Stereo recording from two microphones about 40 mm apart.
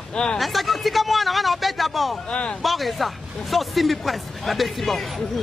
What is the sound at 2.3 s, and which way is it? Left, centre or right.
Speech, left.